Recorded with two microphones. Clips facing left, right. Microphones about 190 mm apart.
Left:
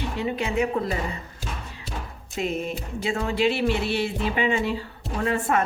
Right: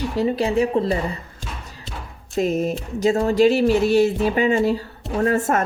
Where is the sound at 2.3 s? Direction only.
40° right (ahead or behind).